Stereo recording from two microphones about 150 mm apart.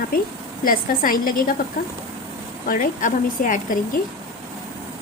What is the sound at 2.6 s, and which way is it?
A woman's voice, 65° left (ahead or behind).